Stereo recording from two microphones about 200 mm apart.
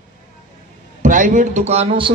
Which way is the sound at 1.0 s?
40° right (ahead or behind).